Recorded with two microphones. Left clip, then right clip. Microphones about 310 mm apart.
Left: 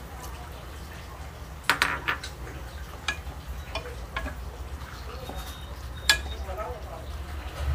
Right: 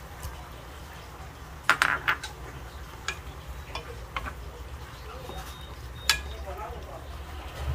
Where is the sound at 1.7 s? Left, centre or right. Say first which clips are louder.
Right 2 dB; centre.